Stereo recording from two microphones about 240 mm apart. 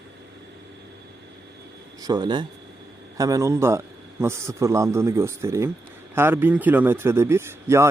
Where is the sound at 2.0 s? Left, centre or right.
Centre.